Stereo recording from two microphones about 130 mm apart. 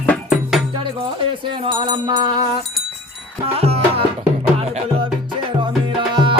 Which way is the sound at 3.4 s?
50° right (ahead or behind).